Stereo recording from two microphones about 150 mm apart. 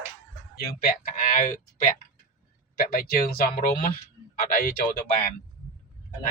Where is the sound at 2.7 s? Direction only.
80° left.